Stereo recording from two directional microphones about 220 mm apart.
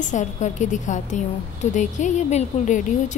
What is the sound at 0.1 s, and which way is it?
A woman's voice, 35° left (ahead or behind).